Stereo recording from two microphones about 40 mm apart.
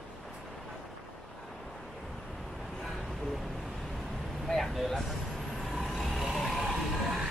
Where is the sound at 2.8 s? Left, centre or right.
Centre.